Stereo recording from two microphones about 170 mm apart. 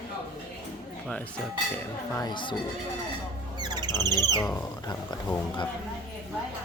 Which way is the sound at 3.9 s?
15° left (ahead or behind).